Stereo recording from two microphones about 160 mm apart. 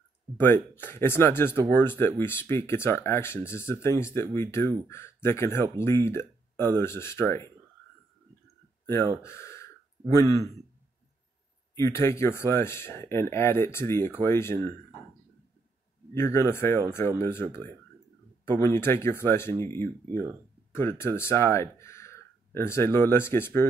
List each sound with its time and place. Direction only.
0.4 s speech: 10° left (ahead or behind)
9.2 s speech: 15° left (ahead or behind)
11.7 s speech: 15° left (ahead or behind)
16.2 s speech: 15° left (ahead or behind)